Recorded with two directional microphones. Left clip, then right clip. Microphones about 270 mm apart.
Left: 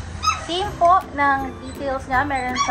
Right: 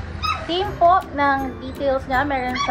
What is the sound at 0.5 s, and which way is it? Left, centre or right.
A child's voice, left.